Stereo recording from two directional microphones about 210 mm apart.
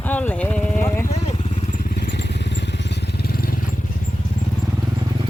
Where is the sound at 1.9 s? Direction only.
50° left (ahead or behind).